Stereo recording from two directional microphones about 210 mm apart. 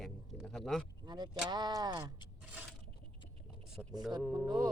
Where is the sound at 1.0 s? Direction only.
20° right (ahead or behind).